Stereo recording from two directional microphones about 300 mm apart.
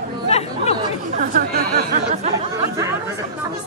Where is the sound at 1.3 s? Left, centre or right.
Right.